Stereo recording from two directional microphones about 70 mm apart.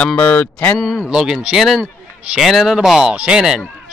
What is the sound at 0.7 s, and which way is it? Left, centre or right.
Moo, centre.